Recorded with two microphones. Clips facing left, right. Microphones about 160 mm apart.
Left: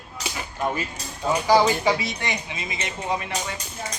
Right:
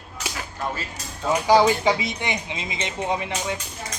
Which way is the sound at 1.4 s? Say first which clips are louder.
Right 2 dB; 15° right (ahead or behind).